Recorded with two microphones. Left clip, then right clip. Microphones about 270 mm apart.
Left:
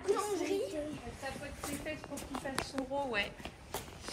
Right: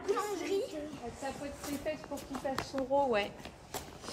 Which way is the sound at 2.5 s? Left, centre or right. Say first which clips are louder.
Right 3 dB; right.